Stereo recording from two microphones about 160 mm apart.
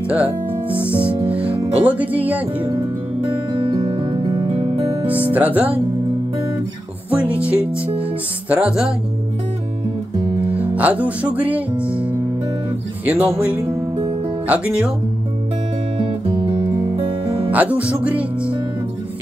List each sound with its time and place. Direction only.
0.1 s speech: 10° right (ahead or behind)
0.9 s music: 35° right (ahead or behind)
1.3 s music: 10° right (ahead or behind)
1.8 s speech: 10° right (ahead or behind)
3.6 s music: 35° right (ahead or behind)
5.3 s speech: 10° right (ahead or behind)
7.1 s speech: 10° right (ahead or behind)
10.5 s speech: 10° right (ahead or behind)
13.0 s speech: 10° right (ahead or behind)
14.5 s speech: 5° right (ahead or behind)
16.0 s music: 30° right (ahead or behind)
17.5 s speech: 10° right (ahead or behind)